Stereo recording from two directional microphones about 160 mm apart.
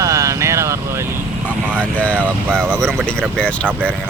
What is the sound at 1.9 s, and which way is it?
Speech, 10° left (ahead or behind).